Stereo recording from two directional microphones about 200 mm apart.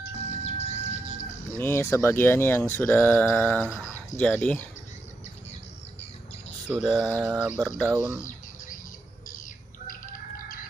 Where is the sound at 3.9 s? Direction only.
5° left (ahead or behind).